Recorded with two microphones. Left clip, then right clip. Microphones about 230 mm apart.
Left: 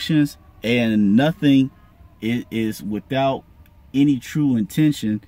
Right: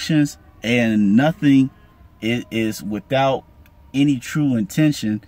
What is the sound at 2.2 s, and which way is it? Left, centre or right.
Speech, right.